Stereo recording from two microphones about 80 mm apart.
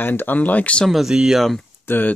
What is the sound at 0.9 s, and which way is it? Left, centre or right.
Speech, centre.